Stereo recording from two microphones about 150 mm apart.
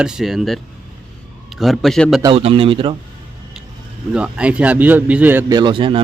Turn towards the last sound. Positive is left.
turn(degrees=-35)  # may be behind; listen again after turning